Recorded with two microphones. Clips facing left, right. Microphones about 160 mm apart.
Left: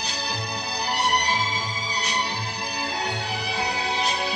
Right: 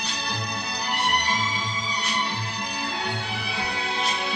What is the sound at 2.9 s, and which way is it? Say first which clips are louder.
Music: left 3 dB; 35° left (ahead or behind).